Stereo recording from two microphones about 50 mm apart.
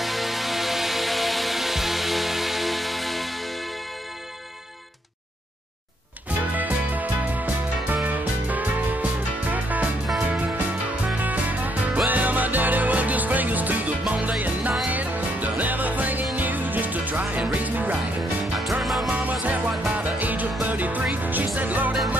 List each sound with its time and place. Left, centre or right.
0.0 s music: centre
6.5 s music: right
18.6 s music: centre
19.9 s music: right